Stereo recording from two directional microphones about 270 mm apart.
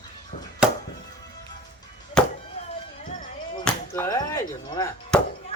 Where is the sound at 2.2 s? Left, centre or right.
Centre.